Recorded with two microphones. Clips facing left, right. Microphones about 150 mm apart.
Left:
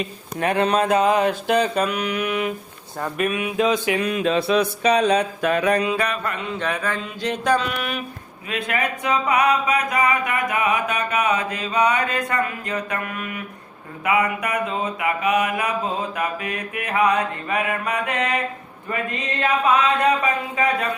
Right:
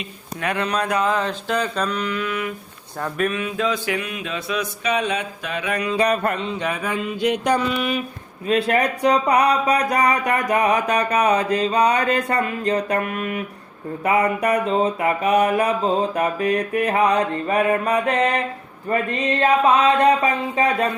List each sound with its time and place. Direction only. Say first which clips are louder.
0.4 s speech: left 4 dB; 25° left (ahead or behind)
1.8 s a sound: left 1 dB; 10° left (ahead or behind)
3.0 s a sound: even; 10° left (ahead or behind)
3.9 s mantra: left 7 dB; 40° left (ahead or behind)
6.1 s speech: right 6 dB; 40° right (ahead or behind)
6.6 s mantra: right 1 dB; 10° right (ahead or behind)
8.4 s speech: right 6 dB; 35° right (ahead or behind)
19.4 s speech: right 2 dB; 30° right (ahead or behind)